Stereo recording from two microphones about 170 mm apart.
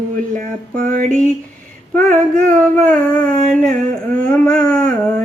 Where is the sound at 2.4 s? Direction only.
50° right (ahead or behind).